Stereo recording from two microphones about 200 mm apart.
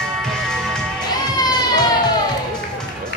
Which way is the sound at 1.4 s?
20° left (ahead or behind).